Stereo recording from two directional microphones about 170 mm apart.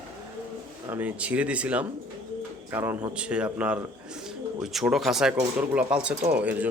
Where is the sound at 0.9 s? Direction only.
10° right (ahead or behind).